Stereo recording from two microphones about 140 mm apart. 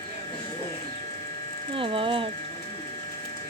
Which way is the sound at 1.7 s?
40° right (ahead or behind).